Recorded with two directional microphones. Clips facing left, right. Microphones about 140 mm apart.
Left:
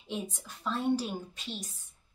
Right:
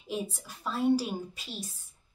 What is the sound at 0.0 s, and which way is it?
A woman's voice, 10° right (ahead or behind).